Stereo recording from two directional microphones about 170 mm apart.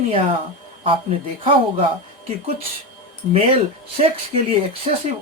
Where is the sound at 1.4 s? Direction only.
30° right (ahead or behind).